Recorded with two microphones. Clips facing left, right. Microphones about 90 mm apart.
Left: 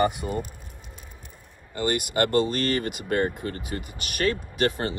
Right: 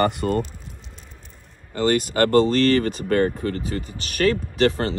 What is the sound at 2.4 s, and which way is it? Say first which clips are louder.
Speech: right 8 dB; 20° left (ahead or behind).